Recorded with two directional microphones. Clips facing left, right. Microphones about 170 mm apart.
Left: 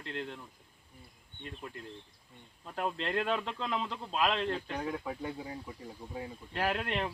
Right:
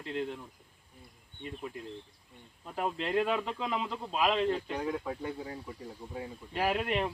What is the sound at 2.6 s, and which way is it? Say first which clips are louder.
Speech: right 1 dB; 5° right (ahead or behind).